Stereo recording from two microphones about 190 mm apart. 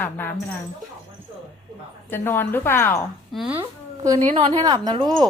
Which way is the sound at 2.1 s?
10° left (ahead or behind).